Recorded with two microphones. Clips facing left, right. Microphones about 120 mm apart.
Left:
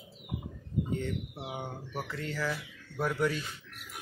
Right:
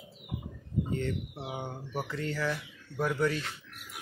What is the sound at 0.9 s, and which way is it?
Speech, 5° left (ahead or behind).